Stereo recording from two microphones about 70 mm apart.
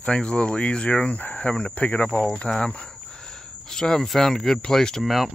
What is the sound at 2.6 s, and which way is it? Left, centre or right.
Speech, centre.